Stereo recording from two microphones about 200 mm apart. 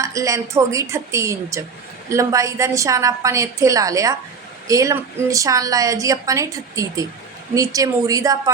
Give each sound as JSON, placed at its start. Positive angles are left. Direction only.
{"t": 0.0, "sound": "a woman's voice", "side_deg": -15}